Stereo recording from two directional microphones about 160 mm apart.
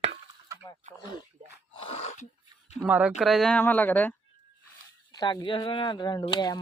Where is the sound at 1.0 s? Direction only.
25° left (ahead or behind).